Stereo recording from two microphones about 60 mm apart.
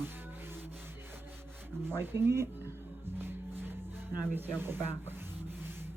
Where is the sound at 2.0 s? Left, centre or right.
Right.